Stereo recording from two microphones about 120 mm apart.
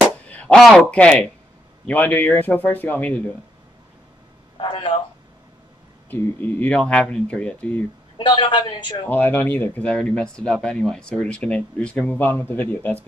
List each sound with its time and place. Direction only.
0.3 s a man's voice: 10° left (ahead or behind)
4.6 s a man's voice: 45° left (ahead or behind)
6.0 s speech: 15° left (ahead or behind)
8.2 s a man's voice: 40° left (ahead or behind)
9.0 s speech: 20° left (ahead or behind)